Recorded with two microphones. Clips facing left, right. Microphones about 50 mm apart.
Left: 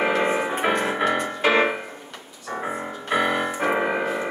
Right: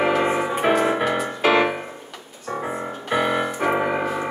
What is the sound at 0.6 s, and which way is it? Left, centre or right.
Music, centre.